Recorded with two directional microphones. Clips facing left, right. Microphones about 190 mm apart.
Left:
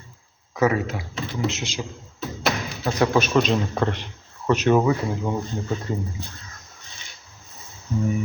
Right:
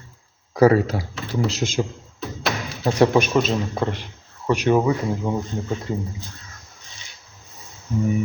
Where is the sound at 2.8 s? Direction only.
30° right (ahead or behind).